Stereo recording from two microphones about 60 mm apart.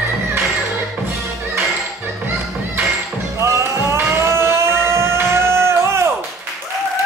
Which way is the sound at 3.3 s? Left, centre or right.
Right.